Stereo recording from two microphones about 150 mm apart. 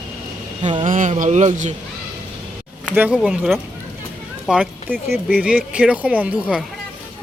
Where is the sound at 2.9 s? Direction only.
10° right (ahead or behind).